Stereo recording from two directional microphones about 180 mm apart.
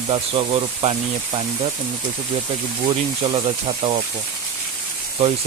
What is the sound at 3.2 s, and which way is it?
Speech, 30° right (ahead or behind).